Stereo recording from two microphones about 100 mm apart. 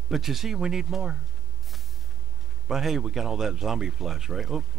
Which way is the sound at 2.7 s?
5° right (ahead or behind).